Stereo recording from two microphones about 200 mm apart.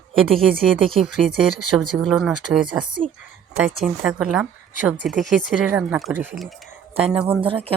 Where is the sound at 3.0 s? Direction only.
35° right (ahead or behind).